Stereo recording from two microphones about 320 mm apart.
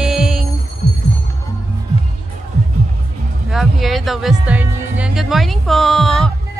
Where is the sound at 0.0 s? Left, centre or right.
Centre.